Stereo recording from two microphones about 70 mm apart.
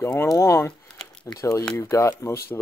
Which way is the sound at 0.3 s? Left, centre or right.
Left.